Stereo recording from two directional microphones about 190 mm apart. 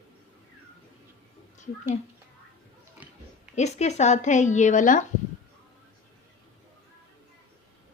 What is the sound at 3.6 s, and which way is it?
A woman's voice, 35° left (ahead or behind).